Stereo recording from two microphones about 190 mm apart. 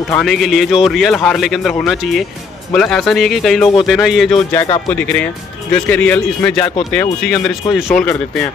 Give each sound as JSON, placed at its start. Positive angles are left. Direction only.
{"t": 0.1, "sound": "a man's voice", "side_deg": 0}
{"t": 4.6, "sound": "speech", "side_deg": 25}
{"t": 4.9, "sound": "a man's voice", "side_deg": 5}